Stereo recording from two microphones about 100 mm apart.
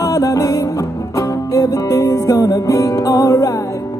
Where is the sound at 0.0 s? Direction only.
35° left (ahead or behind).